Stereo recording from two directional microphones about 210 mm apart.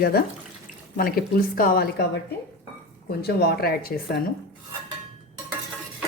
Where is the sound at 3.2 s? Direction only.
50° left (ahead or behind).